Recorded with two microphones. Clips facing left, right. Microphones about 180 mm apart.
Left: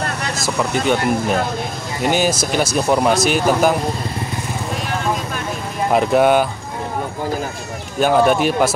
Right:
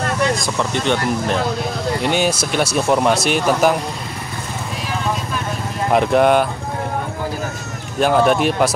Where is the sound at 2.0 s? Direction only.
5° left (ahead or behind).